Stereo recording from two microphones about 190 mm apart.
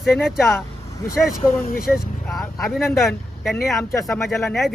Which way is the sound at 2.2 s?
Centre (ahead or behind).